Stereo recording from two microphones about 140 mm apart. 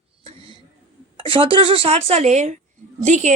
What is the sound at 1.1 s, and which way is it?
A woman's voice, 40° right (ahead or behind).